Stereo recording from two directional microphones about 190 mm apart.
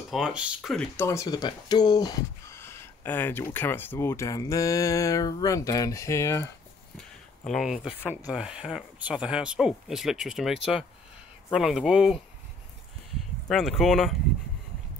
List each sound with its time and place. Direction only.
0.1 s speech: 5° right (ahead or behind)
1.0 s speech: 15° left (ahead or behind)
7.0 s a sound: centre (ahead or behind)
8.3 s speech: 5° right (ahead or behind)
13.5 s speech: centre (ahead or behind)